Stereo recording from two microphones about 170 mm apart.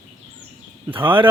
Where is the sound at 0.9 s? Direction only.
30° right (ahead or behind).